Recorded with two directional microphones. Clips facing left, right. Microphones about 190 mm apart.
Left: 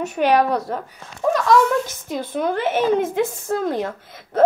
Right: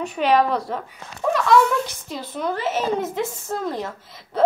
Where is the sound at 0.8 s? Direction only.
40° left (ahead or behind).